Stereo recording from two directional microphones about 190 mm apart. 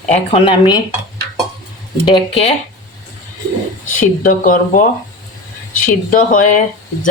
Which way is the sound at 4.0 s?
45° left (ahead or behind).